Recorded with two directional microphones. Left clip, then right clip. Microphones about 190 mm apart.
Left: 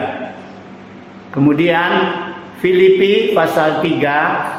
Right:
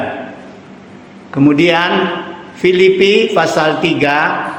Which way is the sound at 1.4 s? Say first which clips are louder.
Right 3 dB; 25° right (ahead or behind).